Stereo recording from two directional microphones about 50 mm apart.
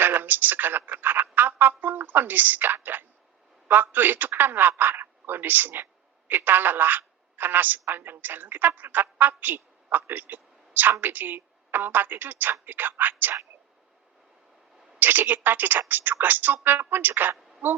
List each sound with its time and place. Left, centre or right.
0.0 s a man's voice: right
14.9 s a woman's voice: right